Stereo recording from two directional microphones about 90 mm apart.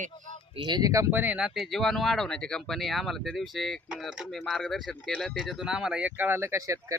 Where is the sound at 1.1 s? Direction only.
20° right (ahead or behind).